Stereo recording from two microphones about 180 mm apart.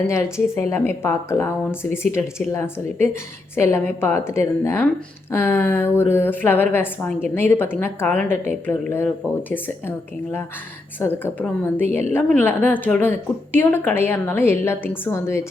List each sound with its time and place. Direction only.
0.1 s a woman's voice: 15° left (ahead or behind)
11.0 s a woman's voice: 10° left (ahead or behind)